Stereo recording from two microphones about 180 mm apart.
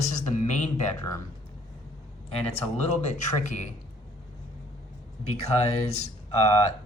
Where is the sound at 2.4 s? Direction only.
35° left (ahead or behind).